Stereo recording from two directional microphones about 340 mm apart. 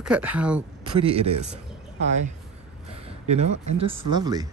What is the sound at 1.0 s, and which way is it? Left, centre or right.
Speech, centre.